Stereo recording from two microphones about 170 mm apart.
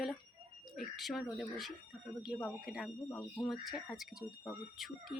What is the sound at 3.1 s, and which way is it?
Speech, 15° left (ahead or behind).